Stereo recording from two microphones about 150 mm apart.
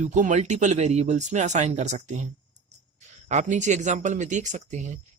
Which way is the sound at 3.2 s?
50° right (ahead or behind).